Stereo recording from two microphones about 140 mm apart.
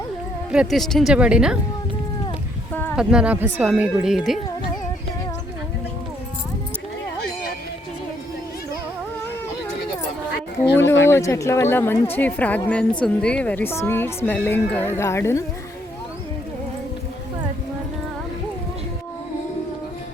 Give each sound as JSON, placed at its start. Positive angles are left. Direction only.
{"t": 0.5, "sound": "speech", "side_deg": -5}
{"t": 2.9, "sound": "speech", "side_deg": -5}
{"t": 10.8, "sound": "a woman's voice", "side_deg": 20}